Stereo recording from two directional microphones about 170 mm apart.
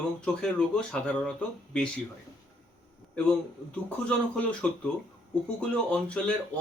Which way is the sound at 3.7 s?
5° left (ahead or behind).